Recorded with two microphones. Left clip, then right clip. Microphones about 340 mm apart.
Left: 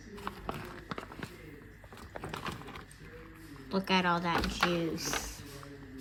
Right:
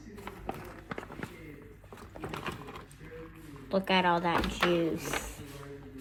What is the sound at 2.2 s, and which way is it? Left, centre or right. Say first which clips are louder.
Clip-clop: right 2 dB; centre.